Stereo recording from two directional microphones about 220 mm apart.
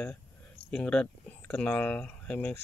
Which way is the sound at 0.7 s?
5° left (ahead or behind).